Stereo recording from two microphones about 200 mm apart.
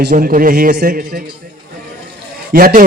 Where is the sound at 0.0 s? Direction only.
45° right (ahead or behind).